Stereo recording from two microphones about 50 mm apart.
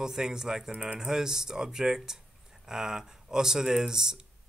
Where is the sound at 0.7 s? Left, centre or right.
Right.